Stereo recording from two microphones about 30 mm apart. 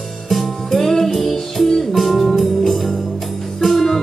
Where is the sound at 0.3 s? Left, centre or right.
Centre.